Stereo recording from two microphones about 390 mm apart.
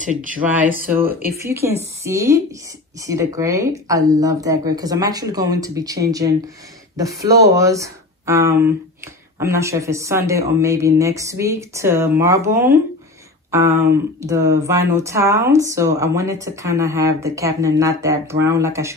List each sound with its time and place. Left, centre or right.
0.0 s speech: centre
0.9 s speech: centre
13.5 s a sound: centre
14.2 s speech: centre